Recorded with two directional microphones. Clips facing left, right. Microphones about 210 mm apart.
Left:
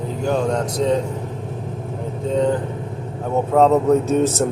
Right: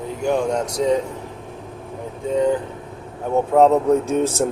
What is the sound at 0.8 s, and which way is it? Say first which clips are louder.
Speech: even; 10° right (ahead or behind).